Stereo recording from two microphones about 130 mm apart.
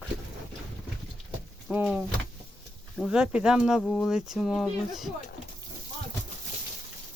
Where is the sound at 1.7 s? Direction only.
5° right (ahead or behind).